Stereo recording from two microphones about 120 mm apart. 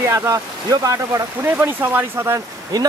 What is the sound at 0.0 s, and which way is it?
Speech, 25° right (ahead or behind).